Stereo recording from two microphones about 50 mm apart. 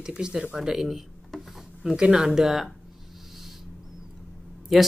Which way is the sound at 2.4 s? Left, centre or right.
Centre.